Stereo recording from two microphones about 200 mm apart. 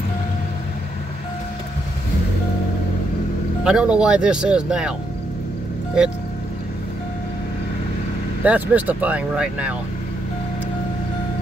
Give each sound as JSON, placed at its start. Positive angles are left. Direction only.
{"t": 3.6, "sound": "speech", "side_deg": -5}
{"t": 8.5, "sound": "speech", "side_deg": -10}